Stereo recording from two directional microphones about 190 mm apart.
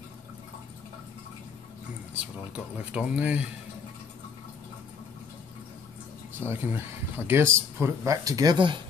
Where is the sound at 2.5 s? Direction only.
5° right (ahead or behind).